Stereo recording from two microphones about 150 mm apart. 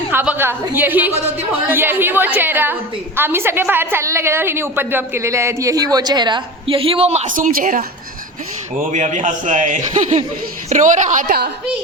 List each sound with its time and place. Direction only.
0.1 s a woman's voice: 15° right (ahead or behind); by 7.9 s 65° right (ahead or behind)
8.8 s a man's voice: 55° right (ahead or behind)